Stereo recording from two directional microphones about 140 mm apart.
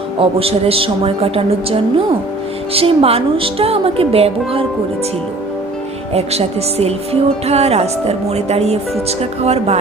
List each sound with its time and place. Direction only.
0.2 s speech: 45° right (ahead or behind)
6.1 s speech: 50° right (ahead or behind)